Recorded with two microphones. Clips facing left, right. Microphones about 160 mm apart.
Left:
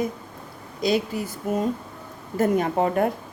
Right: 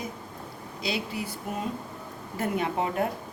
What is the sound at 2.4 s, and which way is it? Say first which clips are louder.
Speech: left 7 dB; 45° left (ahead or behind).